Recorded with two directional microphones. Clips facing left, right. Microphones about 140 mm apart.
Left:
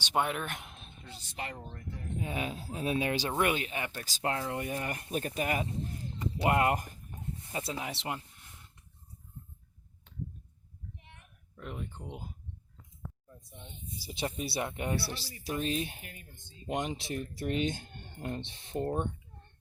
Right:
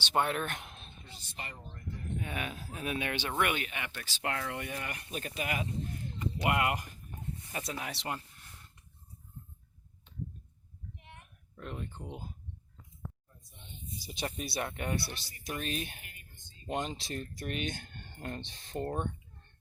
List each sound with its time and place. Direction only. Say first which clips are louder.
0.0 s speech: even; 10° left (ahead or behind)
1.4 s speech: left 5 dB; 90° left
2.1 s speech: left 4 dB; 25° left (ahead or behind)
4.3 s speech: left 3 dB; 25° left (ahead or behind)
7.5 s speech: left 3 dB; 20° left (ahead or behind)
11.5 s speech: even; 5° left (ahead or behind)
14.0 s speech: left 3 dB; 20° left (ahead or behind)